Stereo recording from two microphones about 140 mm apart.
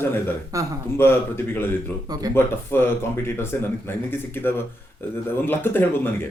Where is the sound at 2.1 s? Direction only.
25° right (ahead or behind).